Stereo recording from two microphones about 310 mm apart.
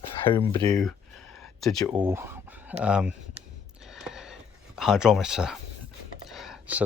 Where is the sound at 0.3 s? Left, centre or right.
Centre.